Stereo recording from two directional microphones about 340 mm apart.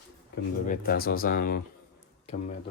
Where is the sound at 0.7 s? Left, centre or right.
Left.